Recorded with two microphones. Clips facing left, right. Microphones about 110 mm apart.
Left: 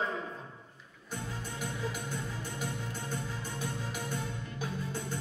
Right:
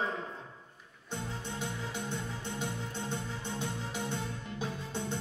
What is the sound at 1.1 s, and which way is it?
Music, 25° right (ahead or behind).